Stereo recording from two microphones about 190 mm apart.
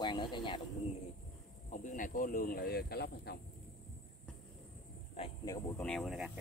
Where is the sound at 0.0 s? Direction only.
25° left (ahead or behind).